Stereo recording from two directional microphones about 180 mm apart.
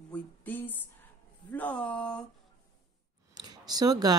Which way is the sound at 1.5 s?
10° left (ahead or behind).